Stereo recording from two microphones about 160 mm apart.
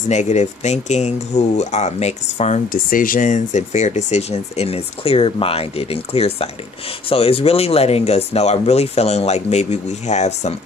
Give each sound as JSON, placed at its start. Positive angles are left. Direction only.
{"t": 0.1, "sound": "speech", "side_deg": 45}